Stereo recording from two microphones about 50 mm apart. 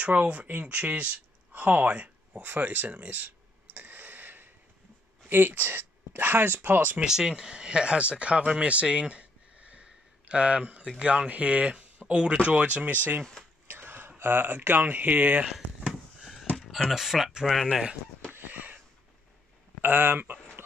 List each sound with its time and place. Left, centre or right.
0.0 s speech: right
2.4 s clicking: right
5.3 s speech: right
7.1 s speech: centre
8.8 s a sound: centre
11.0 s speech: right
12.4 s speech: right
15.9 s a sound: centre
16.9 s speech: centre
18.3 s a sound: right
19.8 s speech: right